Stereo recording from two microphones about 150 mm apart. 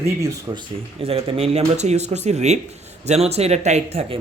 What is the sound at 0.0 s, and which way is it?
Speech, 25° right (ahead or behind).